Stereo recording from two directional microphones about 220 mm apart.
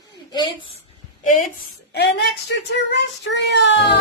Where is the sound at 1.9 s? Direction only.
50° left (ahead or behind).